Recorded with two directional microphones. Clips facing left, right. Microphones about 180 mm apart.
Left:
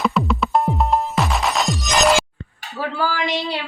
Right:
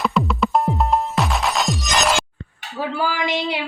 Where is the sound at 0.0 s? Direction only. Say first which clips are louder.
Even; centre (ahead or behind).